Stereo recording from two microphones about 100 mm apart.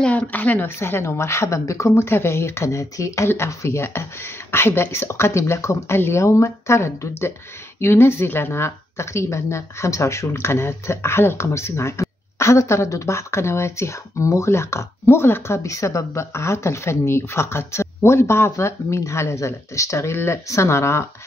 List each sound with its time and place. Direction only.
0.0 s speech: 10° left (ahead or behind)